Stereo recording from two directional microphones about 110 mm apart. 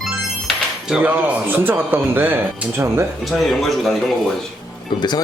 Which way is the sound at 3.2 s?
Centre (ahead or behind).